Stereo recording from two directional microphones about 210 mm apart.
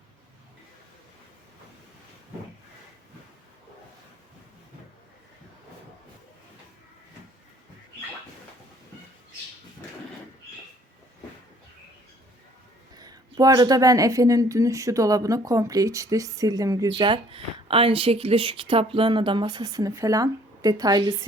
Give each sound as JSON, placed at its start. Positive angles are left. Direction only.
{"t": 13.0, "sound": "speech", "side_deg": -20}